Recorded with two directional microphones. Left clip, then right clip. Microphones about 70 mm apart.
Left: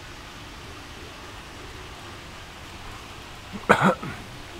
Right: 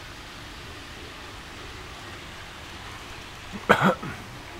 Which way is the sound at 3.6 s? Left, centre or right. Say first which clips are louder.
Left 1 dB; centre.